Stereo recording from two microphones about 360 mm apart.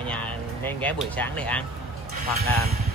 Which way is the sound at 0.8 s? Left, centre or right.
Centre.